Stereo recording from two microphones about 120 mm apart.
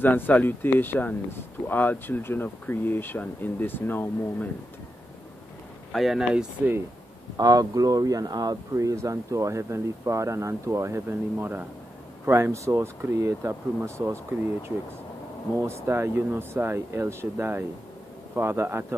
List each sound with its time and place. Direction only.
0.0 s speech: 15° left (ahead or behind)
5.9 s speech: centre (ahead or behind)
7.3 s speech: 30° right (ahead or behind)
15.6 s speech: 20° right (ahead or behind)